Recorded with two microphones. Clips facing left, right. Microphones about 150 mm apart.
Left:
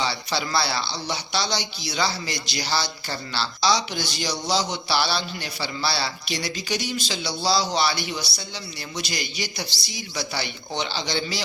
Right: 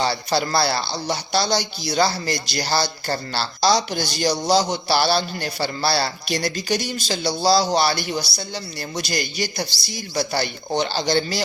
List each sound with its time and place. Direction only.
0.0 s speech: 45° right (ahead or behind)